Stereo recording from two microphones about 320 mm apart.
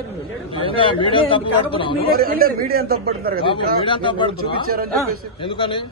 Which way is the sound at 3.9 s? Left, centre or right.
Centre.